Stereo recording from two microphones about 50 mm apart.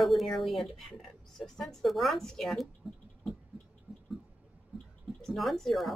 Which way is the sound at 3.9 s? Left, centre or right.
Right.